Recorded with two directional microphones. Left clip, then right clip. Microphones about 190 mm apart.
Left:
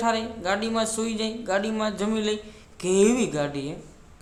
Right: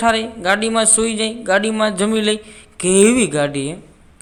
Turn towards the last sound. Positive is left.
turn(degrees=-30)  # may be behind; listen again after turning